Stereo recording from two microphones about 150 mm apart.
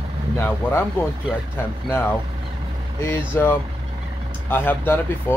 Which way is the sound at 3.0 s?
15° left (ahead or behind).